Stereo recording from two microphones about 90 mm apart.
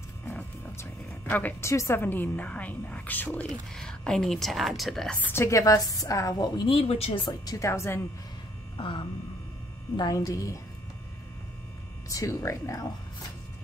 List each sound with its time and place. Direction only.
1.3 s a woman's voice: 30° left (ahead or behind)
3.4 s speech: 5° left (ahead or behind)
5.2 s a woman's voice: 25° left (ahead or behind); by 6.7 s 50° left (ahead or behind)
6.7 s speech: 85° left
7.2 s speech: 45° left (ahead or behind)
7.6 s a woman's voice: 30° left (ahead or behind)
8.7 s a sound: 75° left (ahead or behind)
9.9 s a woman's voice: 40° left (ahead or behind)
12.1 s a woman's voice: 35° left (ahead or behind)